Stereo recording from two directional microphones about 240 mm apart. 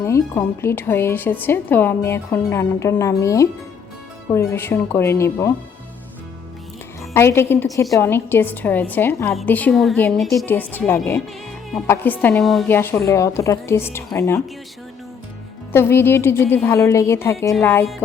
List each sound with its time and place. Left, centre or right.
0.0 s speech: centre
7.1 s speech: centre
15.7 s speech: centre